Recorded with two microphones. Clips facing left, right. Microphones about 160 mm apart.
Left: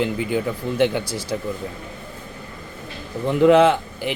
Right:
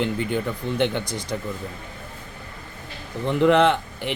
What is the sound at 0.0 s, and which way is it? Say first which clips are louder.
Speech: left 2 dB; 5° left (ahead or behind).